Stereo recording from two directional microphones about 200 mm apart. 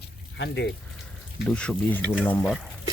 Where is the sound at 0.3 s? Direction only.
60° left (ahead or behind).